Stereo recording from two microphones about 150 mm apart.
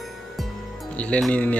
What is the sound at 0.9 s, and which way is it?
Speech, 10° left (ahead or behind).